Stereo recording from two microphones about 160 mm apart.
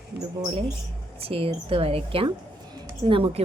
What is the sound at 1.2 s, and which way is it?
A woman's voice, 35° right (ahead or behind).